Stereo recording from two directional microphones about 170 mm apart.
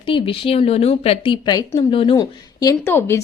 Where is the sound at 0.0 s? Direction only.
30° left (ahead or behind).